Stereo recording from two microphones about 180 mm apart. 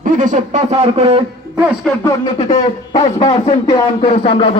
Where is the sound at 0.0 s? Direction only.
45° right (ahead or behind).